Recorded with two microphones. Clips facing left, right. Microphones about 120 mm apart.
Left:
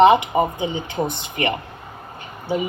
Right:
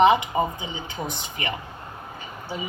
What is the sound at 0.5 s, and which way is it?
A woman's voice, 55° left (ahead or behind).